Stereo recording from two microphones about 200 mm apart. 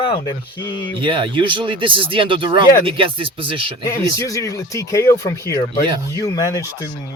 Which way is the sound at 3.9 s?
15° left (ahead or behind).